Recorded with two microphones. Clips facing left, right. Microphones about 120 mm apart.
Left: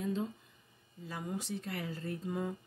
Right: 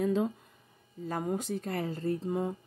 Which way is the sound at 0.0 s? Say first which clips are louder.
Right 7 dB; 65° right (ahead or behind).